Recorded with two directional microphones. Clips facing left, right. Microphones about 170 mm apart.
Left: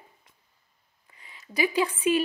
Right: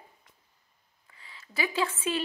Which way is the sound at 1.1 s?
15° left (ahead or behind).